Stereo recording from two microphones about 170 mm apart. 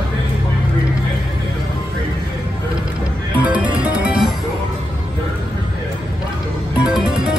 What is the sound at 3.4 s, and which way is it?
Music, 10° right (ahead or behind).